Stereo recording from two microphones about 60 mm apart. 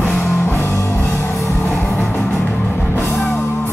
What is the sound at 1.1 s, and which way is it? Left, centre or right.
Music, left.